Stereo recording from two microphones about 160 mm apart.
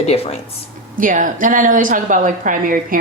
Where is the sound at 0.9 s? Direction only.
55° right (ahead or behind).